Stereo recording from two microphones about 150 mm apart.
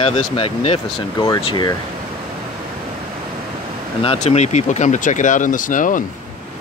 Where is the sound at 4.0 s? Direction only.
40° left (ahead or behind); by 6.0 s 60° left (ahead or behind).